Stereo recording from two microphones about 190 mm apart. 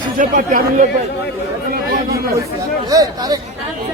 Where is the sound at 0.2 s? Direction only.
45° right (ahead or behind).